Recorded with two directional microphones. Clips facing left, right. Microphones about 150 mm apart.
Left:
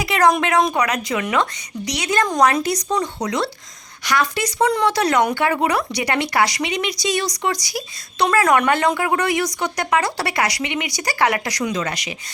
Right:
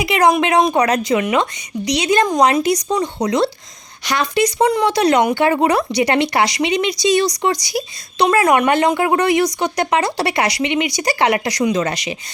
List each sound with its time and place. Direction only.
0.0 s speech: 15° right (ahead or behind)